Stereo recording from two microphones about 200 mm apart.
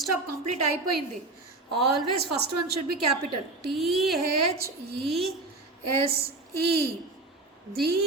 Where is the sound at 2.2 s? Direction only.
55° right (ahead or behind).